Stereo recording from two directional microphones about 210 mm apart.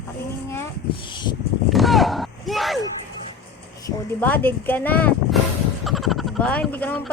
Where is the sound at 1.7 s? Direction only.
Centre (ahead or behind).